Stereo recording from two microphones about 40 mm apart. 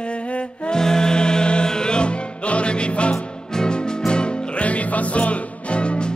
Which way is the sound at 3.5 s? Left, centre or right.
Centre.